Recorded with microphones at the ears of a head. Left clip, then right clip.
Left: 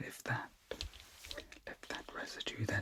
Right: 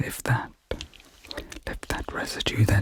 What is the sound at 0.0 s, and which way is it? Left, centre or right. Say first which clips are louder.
Whispering: right 12 dB; right.